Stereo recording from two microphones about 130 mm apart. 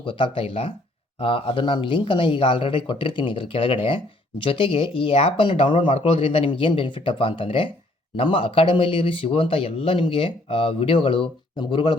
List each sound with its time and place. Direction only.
0.0 s speech: 40° left (ahead or behind)